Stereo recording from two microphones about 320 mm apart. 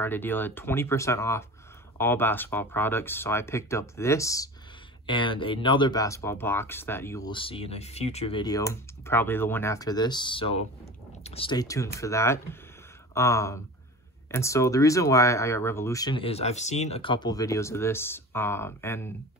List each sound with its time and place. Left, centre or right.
0.0 s speech: centre